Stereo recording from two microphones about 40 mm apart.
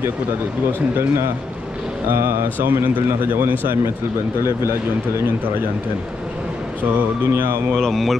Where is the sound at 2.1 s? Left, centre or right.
Right.